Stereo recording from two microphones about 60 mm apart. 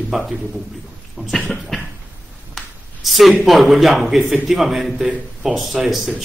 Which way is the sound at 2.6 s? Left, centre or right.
Centre.